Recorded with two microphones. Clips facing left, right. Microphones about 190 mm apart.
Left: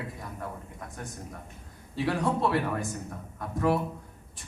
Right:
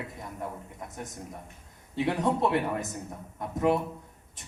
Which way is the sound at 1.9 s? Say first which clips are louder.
Right 1 dB; 20° right (ahead or behind).